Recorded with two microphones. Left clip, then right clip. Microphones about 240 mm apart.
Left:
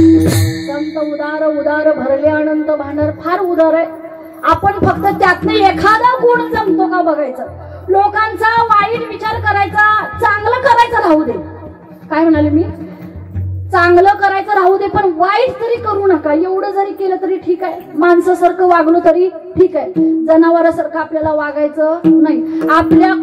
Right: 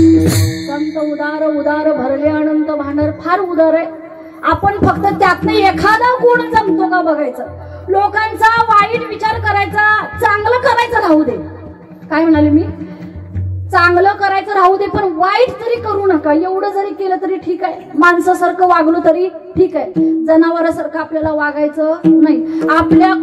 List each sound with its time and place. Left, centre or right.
1.2 s a sound: right
4.4 s a woman's voice: right
13.7 s a woman's voice: right
18.2 s a woman's voice: right